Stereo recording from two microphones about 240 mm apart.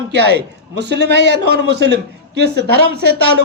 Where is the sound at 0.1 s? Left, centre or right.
Right.